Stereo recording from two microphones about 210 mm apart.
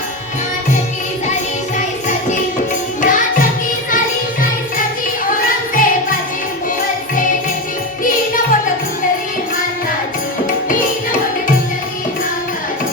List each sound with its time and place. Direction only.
3.0 s music: 40° left (ahead or behind)
5.7 s music: 40° left (ahead or behind)